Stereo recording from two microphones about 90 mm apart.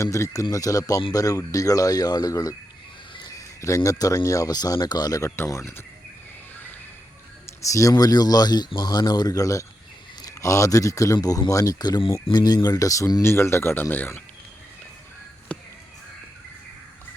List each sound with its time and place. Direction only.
0.0 s speech: 35° left (ahead or behind)
5.5 s speech: 35° left (ahead or behind)
7.4 s speech: 35° left (ahead or behind)
13.2 s speech: 30° left (ahead or behind)
15.5 s a sound: 10° left (ahead or behind)